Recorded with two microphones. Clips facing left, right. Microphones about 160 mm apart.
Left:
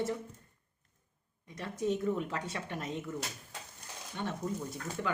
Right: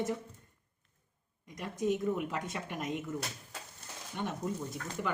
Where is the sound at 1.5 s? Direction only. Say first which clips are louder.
Right 1 dB; 15° right (ahead or behind).